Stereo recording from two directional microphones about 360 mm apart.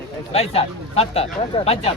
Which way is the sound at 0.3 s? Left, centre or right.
Centre.